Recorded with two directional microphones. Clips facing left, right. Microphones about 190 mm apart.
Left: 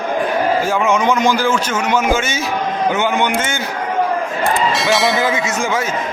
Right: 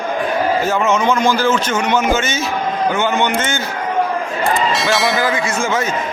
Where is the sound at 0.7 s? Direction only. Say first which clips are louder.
Even; 10° left (ahead or behind).